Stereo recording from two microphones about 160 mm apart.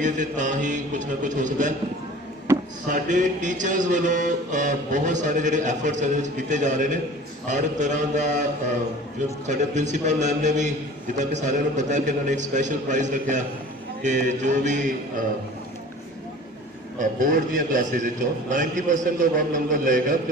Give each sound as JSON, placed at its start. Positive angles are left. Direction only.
{"t": 0.0, "sound": "mantra", "side_deg": -50}
{"t": 2.9, "sound": "mantra", "side_deg": -50}
{"t": 9.5, "sound": "mantra", "side_deg": -50}
{"t": 17.0, "sound": "a man's voice", "side_deg": -55}